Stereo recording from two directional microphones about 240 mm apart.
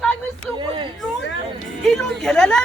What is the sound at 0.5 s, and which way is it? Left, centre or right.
Speech, right.